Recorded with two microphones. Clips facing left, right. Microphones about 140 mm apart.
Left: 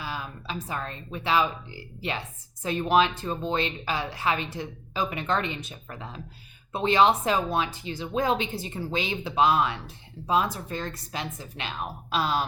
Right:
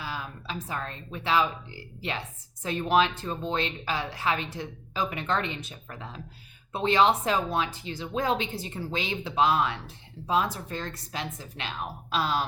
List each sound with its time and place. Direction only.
0.0 s speech: 15° left (ahead or behind)
6.7 s speech: 15° left (ahead or behind)